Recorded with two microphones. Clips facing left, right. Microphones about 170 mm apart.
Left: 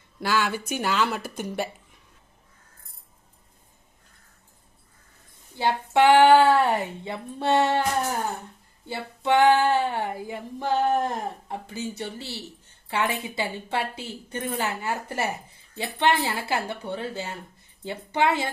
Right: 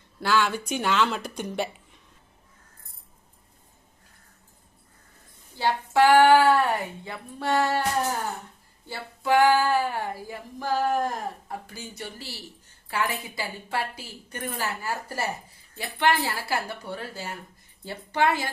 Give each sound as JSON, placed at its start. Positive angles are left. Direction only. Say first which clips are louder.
{"t": 0.2, "sound": "speech", "louder": "right 1 dB", "side_deg": 10}
{"t": 5.5, "sound": "a woman's voice", "louder": "left 1 dB", "side_deg": 20}
{"t": 8.9, "sound": "a woman's voice", "louder": "left 1 dB", "side_deg": 25}